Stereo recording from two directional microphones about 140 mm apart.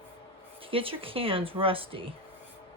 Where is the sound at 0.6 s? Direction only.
40° right (ahead or behind).